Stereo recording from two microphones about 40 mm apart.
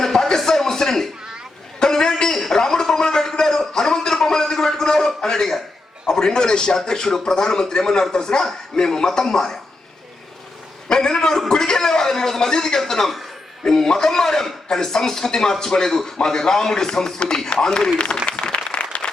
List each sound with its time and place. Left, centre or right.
0.0 s a sound: centre
6.1 s speech: centre
10.8 s a man's voice: centre
18.5 s applause: left